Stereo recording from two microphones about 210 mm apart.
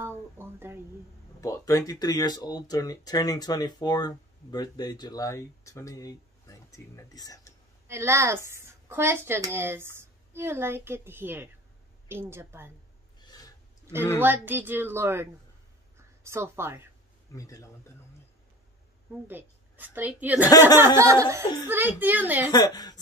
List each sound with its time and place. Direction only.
0.4 s speech: 10° right (ahead or behind)
1.4 s speech: 15° left (ahead or behind)
7.9 s speech: 10° right (ahead or behind)
13.2 s a sound: 20° left (ahead or behind)
14.2 s speech: 10° right (ahead or behind)
17.4 s speech: 15° left (ahead or behind)
19.2 s a woman's voice: 10° right (ahead or behind)
22.5 s a woman's voice: 20° left (ahead or behind)